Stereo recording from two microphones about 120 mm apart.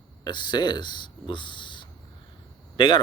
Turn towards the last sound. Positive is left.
turn(degrees=45)  # may be behind; listen again after turning